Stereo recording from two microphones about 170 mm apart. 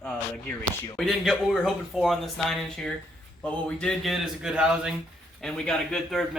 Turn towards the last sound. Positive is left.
turn(degrees=0)  # may be behind; listen again after turning